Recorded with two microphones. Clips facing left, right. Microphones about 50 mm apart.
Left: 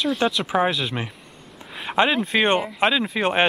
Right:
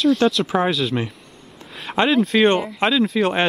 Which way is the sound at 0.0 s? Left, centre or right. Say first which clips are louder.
Right 5 dB; centre.